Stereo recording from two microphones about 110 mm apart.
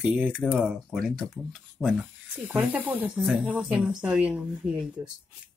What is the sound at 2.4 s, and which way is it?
Speech, 15° right (ahead or behind).